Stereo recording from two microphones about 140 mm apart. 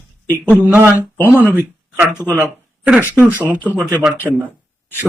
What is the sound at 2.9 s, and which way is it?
Speech, 10° right (ahead or behind).